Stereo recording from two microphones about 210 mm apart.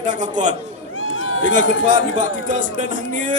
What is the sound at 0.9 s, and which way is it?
Run, 70° left (ahead or behind).